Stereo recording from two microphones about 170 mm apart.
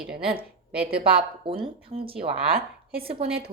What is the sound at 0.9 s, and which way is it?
Speech, 65° right (ahead or behind).